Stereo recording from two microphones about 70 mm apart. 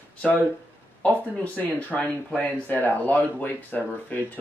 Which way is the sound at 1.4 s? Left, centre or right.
Left.